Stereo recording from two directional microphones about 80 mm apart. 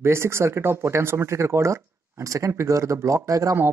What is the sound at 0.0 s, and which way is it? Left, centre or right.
Speech, right.